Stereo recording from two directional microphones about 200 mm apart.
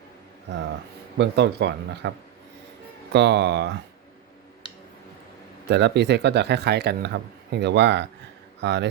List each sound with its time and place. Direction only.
1.2 s speech: 60° right (ahead or behind)
5.6 s speech: 60° right (ahead or behind)